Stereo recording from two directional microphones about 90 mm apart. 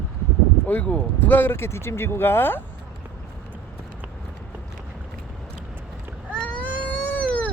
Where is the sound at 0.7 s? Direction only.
15° left (ahead or behind).